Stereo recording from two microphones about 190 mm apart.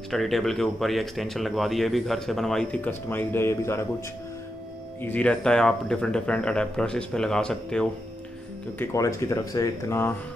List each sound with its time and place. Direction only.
0.1 s speech: centre (ahead or behind)
5.0 s speech: 5° left (ahead or behind)